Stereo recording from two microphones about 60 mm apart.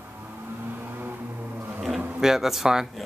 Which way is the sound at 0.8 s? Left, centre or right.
Right.